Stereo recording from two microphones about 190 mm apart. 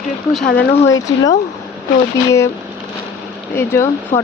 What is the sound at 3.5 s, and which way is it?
Speech, 15° left (ahead or behind).